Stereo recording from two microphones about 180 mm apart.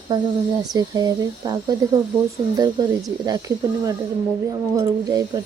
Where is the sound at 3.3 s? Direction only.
20° right (ahead or behind).